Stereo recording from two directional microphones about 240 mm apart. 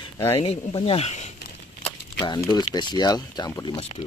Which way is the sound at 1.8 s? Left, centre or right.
Centre.